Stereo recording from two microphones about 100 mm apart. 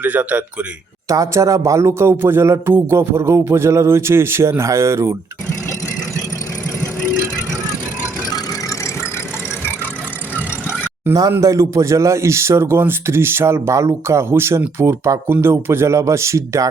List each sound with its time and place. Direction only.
0.0 s a man's voice: 15° right (ahead or behind)
1.0 s speech: 30° right (ahead or behind)
10.3 s vehicle: 15° right (ahead or behind)
11.1 s speech: 35° right (ahead or behind)